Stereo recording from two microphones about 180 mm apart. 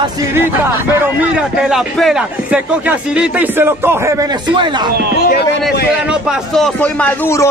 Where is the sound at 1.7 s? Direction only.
Centre (ahead or behind).